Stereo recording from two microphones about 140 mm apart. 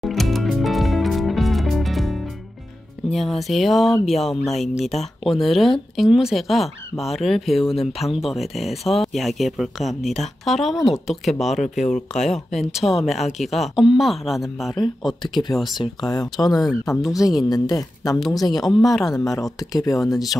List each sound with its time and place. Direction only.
0.0 s music: centre (ahead or behind)
3.1 s speech: centre (ahead or behind)
15.2 s speech: 30° left (ahead or behind)
16.9 s speech: centre (ahead or behind)
17.5 s speech: 25° left (ahead or behind)
18.8 s speech: centre (ahead or behind)
19.0 s speech: 25° left (ahead or behind)